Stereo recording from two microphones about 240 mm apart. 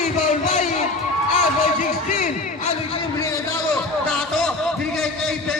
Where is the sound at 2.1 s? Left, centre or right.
Left.